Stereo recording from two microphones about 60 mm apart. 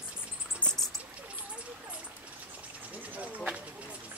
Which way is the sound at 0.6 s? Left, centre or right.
Left.